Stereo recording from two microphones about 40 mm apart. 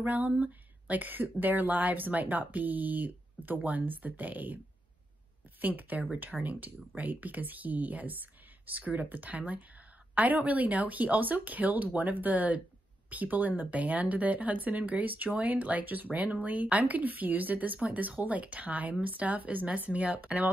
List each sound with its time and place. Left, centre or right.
0.0 s speech: right
5.6 s speech: right